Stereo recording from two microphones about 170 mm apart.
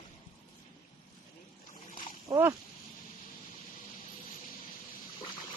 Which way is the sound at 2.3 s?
25° right (ahead or behind).